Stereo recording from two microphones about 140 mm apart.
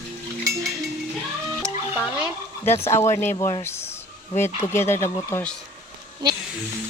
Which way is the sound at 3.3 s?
30° left (ahead or behind).